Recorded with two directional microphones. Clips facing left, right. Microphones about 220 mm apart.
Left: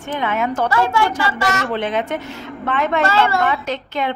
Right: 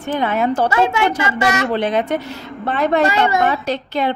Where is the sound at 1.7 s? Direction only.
35° right (ahead or behind).